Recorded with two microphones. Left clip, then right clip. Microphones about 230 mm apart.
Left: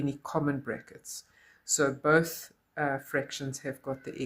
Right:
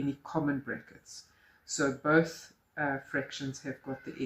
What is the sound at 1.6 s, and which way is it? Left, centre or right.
Speech, left.